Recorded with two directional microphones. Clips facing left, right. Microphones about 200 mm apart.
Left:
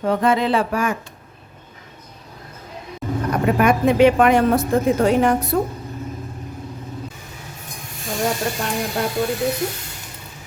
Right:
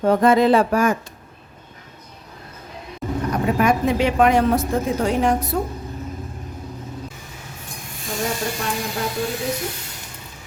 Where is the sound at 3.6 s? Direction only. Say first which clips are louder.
Left 5 dB; 60° left (ahead or behind).